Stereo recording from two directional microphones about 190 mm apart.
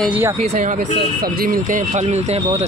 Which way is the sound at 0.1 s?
10° right (ahead or behind).